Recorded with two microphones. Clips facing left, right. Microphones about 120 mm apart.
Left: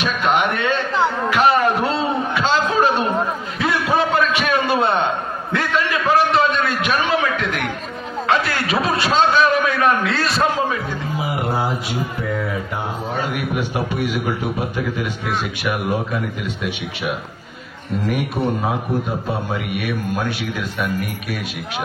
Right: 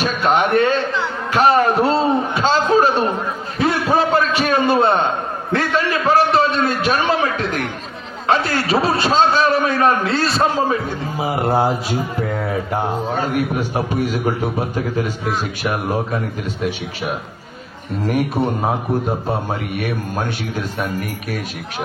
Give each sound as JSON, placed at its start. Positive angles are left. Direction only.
{"t": 0.0, "sound": "a man's voice", "side_deg": -35}
{"t": 1.3, "sound": "a sound", "side_deg": -40}
{"t": 8.3, "sound": "a man's voice", "side_deg": -35}
{"t": 15.6, "sound": "a man's voice", "side_deg": -40}